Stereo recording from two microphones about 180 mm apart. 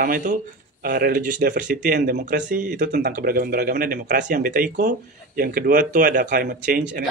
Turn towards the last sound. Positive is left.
turn(degrees=-55)  # may be behind; listen again after turning